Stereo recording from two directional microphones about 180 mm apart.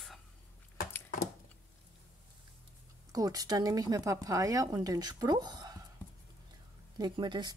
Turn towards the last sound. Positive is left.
turn(degrees=-25)  # may be behind; listen again after turning